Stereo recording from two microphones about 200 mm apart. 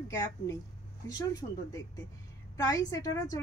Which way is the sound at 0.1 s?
15° left (ahead or behind).